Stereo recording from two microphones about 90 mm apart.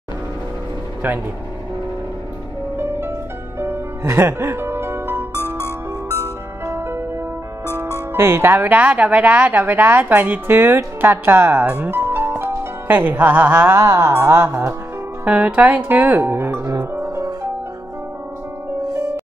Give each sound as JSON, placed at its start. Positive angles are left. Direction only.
{"t": 3.5, "sound": "music", "side_deg": -25}
{"t": 5.3, "sound": "music", "side_deg": 25}
{"t": 6.6, "sound": "music", "side_deg": -25}
{"t": 8.1, "sound": "speech", "side_deg": -30}
{"t": 11.6, "sound": "speech", "side_deg": -15}
{"t": 11.9, "sound": "music", "side_deg": -25}
{"t": 13.7, "sound": "music", "side_deg": -35}
{"t": 14.2, "sound": "speech", "side_deg": -30}
{"t": 15.2, "sound": "speech", "side_deg": -15}